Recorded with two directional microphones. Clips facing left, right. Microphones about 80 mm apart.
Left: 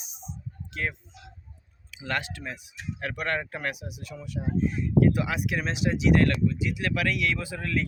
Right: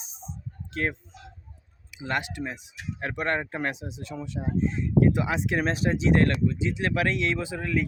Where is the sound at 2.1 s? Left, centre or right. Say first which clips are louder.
Right 2 dB; right.